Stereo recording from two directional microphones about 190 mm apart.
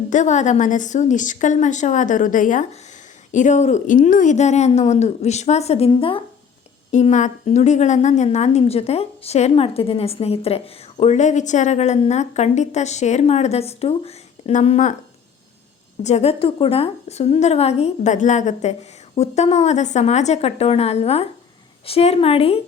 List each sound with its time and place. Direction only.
0.1 s a woman's voice: 40° left (ahead or behind)
6.9 s a woman's voice: 40° left (ahead or behind)
16.0 s a woman's voice: 35° left (ahead or behind)